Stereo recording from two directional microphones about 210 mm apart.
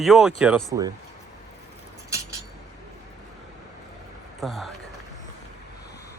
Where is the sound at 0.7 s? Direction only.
15° right (ahead or behind).